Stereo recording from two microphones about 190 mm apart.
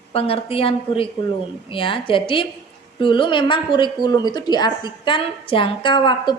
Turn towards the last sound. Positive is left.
turn(degrees=25)  # may be behind; listen again after turning